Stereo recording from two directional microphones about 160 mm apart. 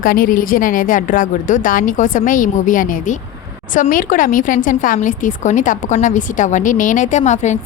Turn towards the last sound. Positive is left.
turn(degrees=45)  # may be behind; listen again after turning